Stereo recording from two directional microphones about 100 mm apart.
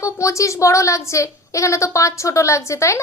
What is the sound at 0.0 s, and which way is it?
A woman's voice, 30° left (ahead or behind).